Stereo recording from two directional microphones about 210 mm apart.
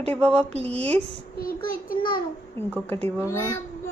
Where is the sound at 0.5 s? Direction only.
30° right (ahead or behind).